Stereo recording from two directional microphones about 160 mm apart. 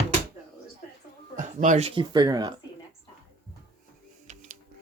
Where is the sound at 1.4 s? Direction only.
50° right (ahead or behind).